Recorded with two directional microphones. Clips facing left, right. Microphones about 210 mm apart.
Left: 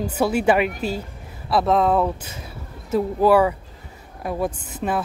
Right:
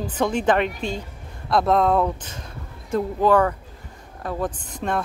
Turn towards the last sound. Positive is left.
turn(degrees=5)  # may be behind; listen again after turning